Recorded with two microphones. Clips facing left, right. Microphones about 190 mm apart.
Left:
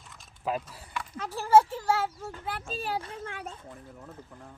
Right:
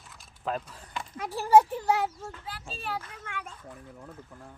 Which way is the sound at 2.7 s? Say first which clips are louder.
Left 2 dB; 35° left (ahead or behind).